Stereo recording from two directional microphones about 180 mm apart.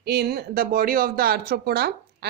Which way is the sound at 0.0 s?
65° right (ahead or behind).